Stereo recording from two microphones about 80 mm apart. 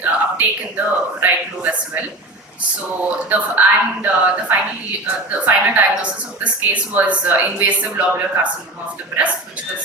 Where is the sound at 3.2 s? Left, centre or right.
Centre.